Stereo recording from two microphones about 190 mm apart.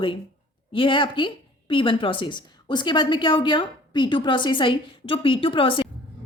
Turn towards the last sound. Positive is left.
turn(degrees=30)  # may be behind; listen again after turning